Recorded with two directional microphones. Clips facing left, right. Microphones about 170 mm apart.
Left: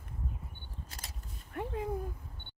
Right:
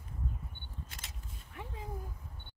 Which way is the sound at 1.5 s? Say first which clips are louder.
Left 10 dB; 55° left (ahead or behind).